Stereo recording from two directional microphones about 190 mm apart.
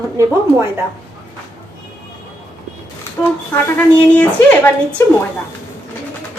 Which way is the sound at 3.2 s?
10° left (ahead or behind).